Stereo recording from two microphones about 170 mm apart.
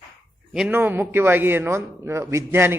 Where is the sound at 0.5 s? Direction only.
10° right (ahead or behind).